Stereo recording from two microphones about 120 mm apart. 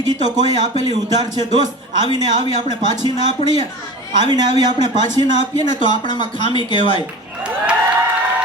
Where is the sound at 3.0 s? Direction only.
35° right (ahead or behind).